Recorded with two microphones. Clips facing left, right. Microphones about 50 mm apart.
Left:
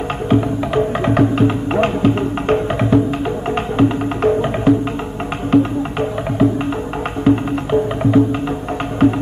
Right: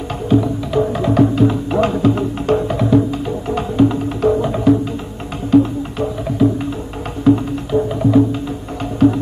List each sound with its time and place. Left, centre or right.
0.3 s music: left